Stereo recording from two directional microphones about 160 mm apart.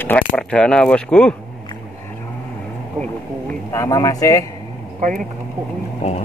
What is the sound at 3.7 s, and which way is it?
Speech, 20° left (ahead or behind).